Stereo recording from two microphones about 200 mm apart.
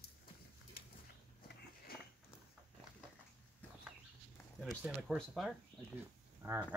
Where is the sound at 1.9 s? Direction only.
50° left (ahead or behind).